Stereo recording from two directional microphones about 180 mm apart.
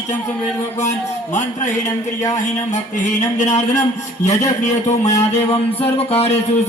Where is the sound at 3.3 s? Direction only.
40° left (ahead or behind).